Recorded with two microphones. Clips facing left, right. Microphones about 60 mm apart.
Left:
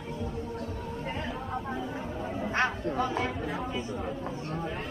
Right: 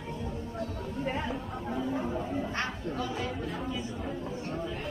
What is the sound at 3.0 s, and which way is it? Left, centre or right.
Chatter, left.